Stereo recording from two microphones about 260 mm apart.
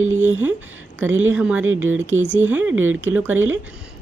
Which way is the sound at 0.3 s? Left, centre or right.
Centre.